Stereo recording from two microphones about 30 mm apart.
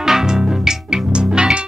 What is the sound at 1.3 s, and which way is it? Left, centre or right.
Music, right.